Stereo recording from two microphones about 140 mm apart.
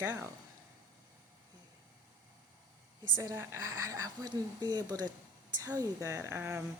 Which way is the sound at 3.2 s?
20° right (ahead or behind).